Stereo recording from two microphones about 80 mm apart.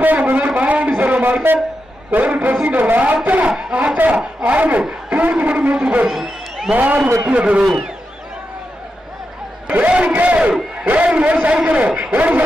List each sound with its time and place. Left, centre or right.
0.0 s a sound: right
2.0 s a man's voice: centre
6.1 s a sound: centre
6.7 s a man's voice: centre
7.6 s speech: centre
9.7 s a man's voice: centre